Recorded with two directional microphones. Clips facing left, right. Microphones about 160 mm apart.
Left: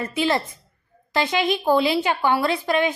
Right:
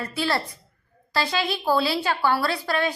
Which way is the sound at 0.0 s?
20° left (ahead or behind).